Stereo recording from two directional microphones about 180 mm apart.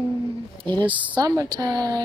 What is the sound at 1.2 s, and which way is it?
Speech, 20° right (ahead or behind).